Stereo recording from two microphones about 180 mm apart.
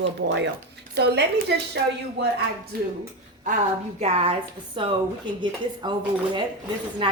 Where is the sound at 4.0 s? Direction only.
35° right (ahead or behind).